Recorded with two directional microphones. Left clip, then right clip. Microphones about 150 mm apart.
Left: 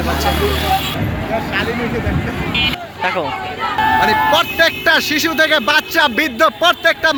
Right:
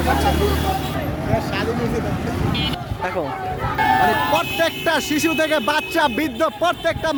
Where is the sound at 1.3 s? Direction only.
35° right (ahead or behind).